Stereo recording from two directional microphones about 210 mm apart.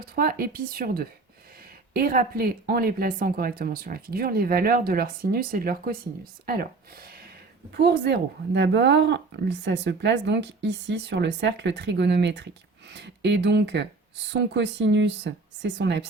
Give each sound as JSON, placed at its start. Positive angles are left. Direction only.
{"t": 0.0, "sound": "speech", "side_deg": -45}